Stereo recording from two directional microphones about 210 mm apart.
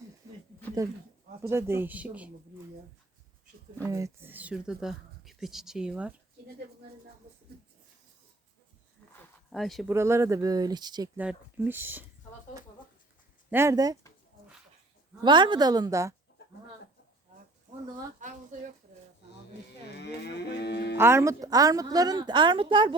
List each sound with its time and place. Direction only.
0.8 s a woman's voice: 15° right (ahead or behind)
3.8 s speech: 15° right (ahead or behind)
9.5 s speech: centre (ahead or behind)
9.9 s a woman's voice: 15° right (ahead or behind)
11.2 s a woman's voice: 5° right (ahead or behind)
13.5 s a woman's voice: 15° right (ahead or behind)
15.2 s a woman's voice: 20° right (ahead or behind)
18.2 s speech: 35° right (ahead or behind)
20.0 s cattle: 55° left (ahead or behind)
21.0 s a woman's voice: 15° right (ahead or behind)